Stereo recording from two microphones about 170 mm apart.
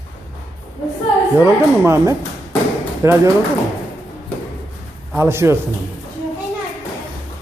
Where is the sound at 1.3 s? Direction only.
15° right (ahead or behind).